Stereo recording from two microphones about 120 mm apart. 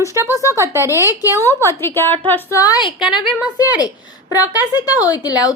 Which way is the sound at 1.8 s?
20° left (ahead or behind).